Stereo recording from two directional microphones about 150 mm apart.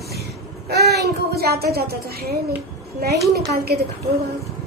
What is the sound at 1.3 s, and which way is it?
A woman's voice, 90° right.